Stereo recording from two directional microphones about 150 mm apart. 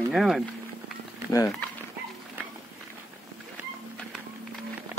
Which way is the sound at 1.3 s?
20° left (ahead or behind).